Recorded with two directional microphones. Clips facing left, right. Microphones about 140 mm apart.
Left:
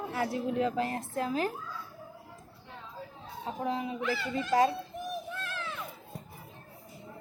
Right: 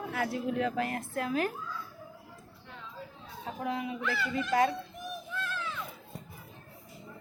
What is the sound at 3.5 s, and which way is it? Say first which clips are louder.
Speech: left 1 dB; 35° left (ahead or behind).